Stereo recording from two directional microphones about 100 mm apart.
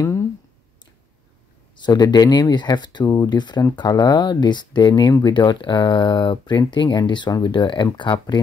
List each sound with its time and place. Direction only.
1.8 s speech: 40° left (ahead or behind)